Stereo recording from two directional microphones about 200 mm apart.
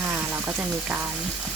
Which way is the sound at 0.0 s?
10° right (ahead or behind).